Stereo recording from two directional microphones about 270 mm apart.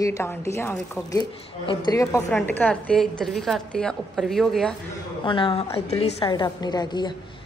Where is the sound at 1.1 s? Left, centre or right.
Centre.